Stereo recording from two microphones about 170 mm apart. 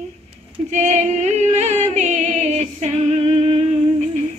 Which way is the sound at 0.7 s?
45° right (ahead or behind).